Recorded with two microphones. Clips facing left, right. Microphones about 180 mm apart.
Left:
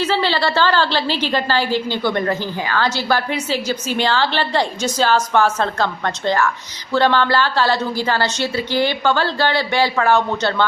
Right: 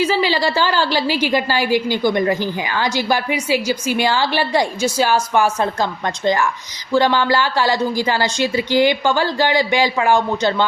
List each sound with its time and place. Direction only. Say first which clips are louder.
0.0 s a woman's voice: right 1 dB; 10° right (ahead or behind)